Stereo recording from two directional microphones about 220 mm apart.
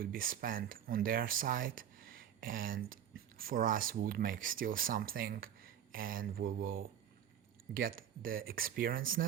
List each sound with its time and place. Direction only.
0.0 s speech: 40° right (ahead or behind)